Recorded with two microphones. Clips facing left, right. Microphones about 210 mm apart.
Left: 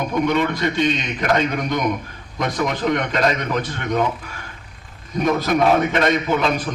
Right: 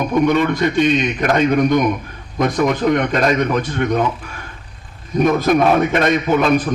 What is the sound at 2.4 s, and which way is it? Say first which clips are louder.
A man's voice: right 5 dB; 50° right (ahead or behind).